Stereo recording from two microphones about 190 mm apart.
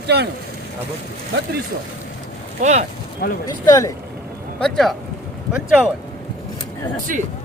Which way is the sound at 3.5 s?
20° left (ahead or behind).